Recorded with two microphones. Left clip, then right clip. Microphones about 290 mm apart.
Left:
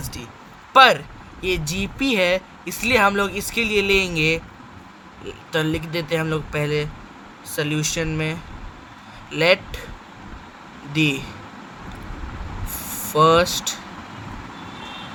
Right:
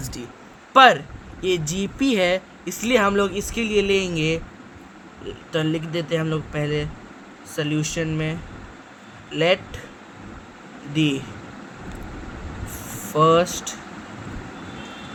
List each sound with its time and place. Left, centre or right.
0.7 s speech: left
5.5 s speech: left
10.9 s speech: left
13.1 s speech: left
13.5 s speech: left